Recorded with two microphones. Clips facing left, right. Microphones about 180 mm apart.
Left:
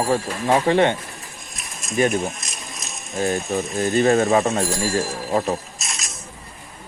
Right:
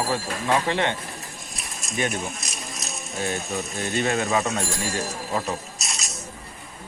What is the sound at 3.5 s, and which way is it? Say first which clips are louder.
Speech: left 9 dB; 35° left (ahead or behind).